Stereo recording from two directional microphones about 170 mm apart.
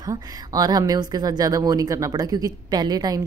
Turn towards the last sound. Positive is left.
turn(degrees=-20)  # may be behind; listen again after turning